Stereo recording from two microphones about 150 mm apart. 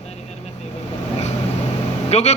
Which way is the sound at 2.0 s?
45° left (ahead or behind).